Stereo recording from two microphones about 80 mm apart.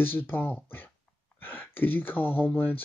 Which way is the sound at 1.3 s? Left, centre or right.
Left.